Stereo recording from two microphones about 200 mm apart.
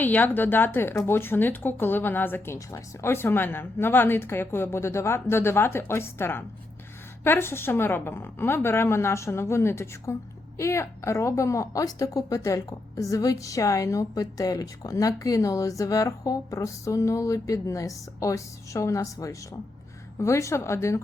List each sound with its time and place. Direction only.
0.0 s a woman's voice: 10° left (ahead or behind)